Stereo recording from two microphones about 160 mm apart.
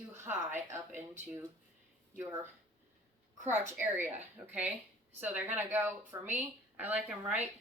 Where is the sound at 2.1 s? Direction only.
15° right (ahead or behind).